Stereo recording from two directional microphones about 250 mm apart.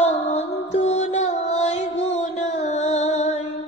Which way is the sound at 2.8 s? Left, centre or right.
Left.